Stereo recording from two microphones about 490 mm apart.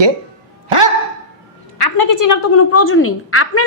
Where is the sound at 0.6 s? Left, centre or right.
Right.